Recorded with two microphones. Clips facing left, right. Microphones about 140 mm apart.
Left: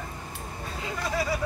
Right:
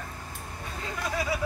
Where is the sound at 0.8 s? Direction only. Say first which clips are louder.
Left 2 dB; 5° left (ahead or behind).